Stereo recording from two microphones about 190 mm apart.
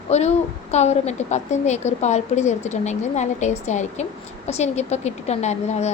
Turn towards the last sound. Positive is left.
turn(degrees=35)  # may be behind; listen again after turning